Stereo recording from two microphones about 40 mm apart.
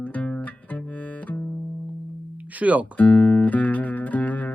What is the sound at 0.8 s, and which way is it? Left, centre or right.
Music, left.